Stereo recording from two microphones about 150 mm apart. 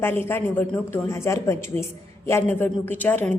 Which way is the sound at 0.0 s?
15° left (ahead or behind).